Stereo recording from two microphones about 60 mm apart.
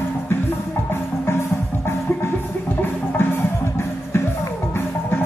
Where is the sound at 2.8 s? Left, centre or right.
Left.